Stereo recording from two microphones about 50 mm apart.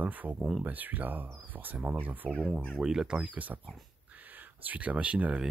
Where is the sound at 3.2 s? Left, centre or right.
Right.